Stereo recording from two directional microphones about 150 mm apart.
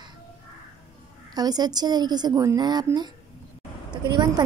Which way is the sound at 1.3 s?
25° right (ahead or behind).